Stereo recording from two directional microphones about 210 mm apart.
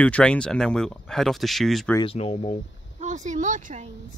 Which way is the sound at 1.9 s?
25° left (ahead or behind).